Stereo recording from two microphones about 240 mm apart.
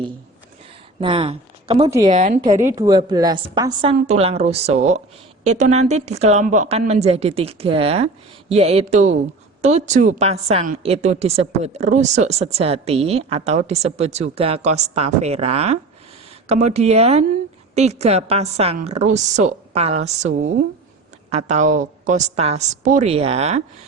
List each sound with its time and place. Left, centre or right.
1.0 s speech: right
2.6 s a woman's voice: centre